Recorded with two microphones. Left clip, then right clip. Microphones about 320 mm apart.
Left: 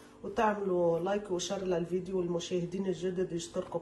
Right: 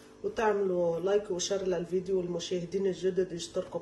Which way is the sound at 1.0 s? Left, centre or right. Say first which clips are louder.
Right 4 dB; centre.